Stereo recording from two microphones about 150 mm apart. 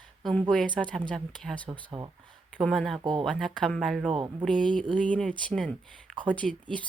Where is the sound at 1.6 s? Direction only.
30° right (ahead or behind).